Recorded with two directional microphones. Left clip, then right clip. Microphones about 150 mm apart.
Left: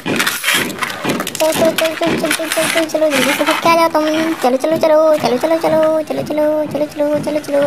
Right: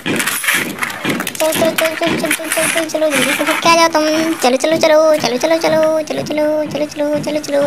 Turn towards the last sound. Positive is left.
turn(degrees=15)  # may be behind; listen again after turning